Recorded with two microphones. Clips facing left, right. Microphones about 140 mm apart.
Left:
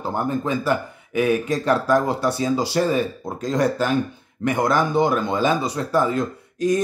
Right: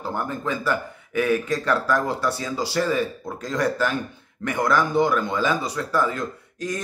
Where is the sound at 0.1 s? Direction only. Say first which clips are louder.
Left 5 dB; 20° left (ahead or behind).